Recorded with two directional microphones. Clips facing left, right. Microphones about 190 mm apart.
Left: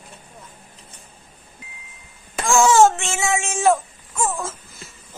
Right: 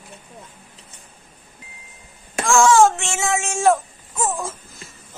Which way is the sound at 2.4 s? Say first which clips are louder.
Even; centre (ahead or behind).